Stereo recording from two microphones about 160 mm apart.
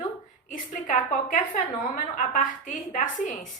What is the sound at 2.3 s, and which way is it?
Speech, 55° left (ahead or behind).